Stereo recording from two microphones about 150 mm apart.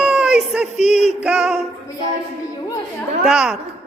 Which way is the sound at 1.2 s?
5° right (ahead or behind).